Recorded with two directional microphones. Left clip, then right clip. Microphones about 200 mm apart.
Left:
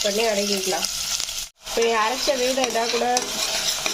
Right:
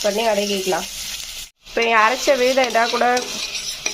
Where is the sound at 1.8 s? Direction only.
10° right (ahead or behind).